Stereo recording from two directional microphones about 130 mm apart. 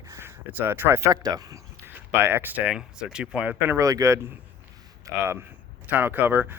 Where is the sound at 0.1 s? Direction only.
20° right (ahead or behind).